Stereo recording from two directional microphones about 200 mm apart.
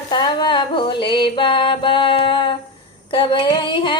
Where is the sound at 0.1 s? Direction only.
20° left (ahead or behind).